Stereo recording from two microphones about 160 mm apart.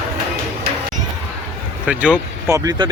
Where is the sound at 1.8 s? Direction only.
5° right (ahead or behind).